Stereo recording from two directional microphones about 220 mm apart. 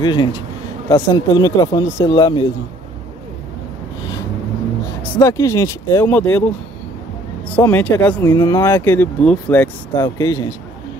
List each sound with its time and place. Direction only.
0.0 s speech: 20° left (ahead or behind)
5.1 s speech: 15° left (ahead or behind)
7.5 s speech: 10° left (ahead or behind)